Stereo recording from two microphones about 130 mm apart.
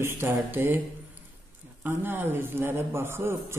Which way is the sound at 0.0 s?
20° right (ahead or behind).